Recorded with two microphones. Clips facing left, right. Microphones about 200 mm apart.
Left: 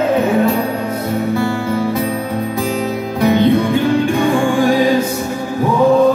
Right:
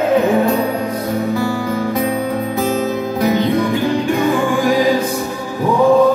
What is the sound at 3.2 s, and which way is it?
Music, 25° left (ahead or behind).